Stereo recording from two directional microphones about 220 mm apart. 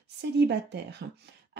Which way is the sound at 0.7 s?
50° right (ahead or behind).